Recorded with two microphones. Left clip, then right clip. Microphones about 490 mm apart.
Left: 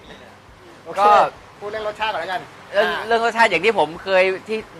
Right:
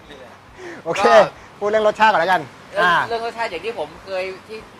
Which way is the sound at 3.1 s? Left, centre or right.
Left.